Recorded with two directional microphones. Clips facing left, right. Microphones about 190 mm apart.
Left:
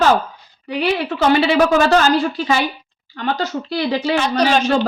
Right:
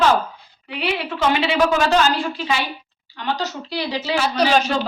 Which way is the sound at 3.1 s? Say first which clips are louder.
Left 4 dB; 50° left (ahead or behind).